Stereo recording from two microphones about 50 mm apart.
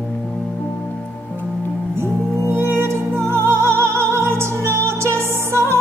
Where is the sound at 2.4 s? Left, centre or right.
Right.